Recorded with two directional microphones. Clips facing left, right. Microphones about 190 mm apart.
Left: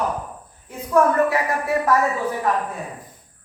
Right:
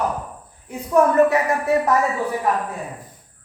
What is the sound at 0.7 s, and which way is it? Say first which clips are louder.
A woman's voice: right 1 dB; 20° right (ahead or behind).